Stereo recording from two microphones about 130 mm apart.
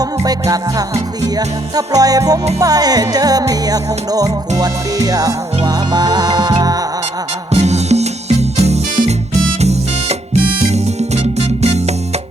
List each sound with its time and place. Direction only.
0.0 s music: 30° right (ahead or behind)
7.5 s music: 55° right (ahead or behind)